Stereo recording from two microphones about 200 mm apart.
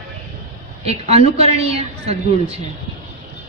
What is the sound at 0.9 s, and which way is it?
A woman's voice, 30° right (ahead or behind).